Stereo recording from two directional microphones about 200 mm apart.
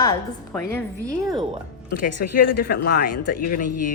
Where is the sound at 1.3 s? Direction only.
25° right (ahead or behind).